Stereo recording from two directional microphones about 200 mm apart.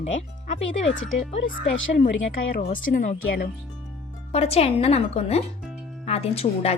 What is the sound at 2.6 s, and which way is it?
Speech, 40° left (ahead or behind).